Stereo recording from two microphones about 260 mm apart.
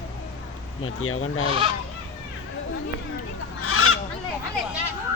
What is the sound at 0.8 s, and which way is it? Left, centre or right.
Speech, left.